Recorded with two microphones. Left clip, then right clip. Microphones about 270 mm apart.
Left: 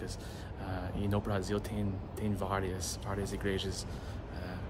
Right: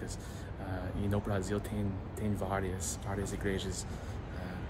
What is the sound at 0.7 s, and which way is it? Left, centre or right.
Speech, centre.